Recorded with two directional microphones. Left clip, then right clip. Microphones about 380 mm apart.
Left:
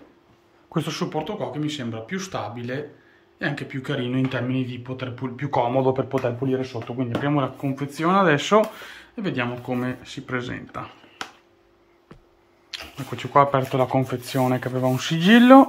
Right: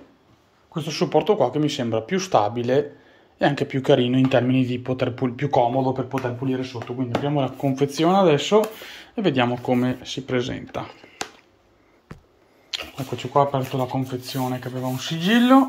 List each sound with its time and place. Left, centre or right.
0.7 s speech: centre
1.1 s speech: centre
5.9 s speech: centre
9.1 s speech: centre
12.9 s speech: centre
13.7 s speech: centre